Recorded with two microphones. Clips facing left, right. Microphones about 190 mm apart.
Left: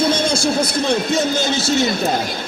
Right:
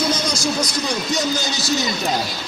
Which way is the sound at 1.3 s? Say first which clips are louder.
Left 4 dB; 55° left (ahead or behind).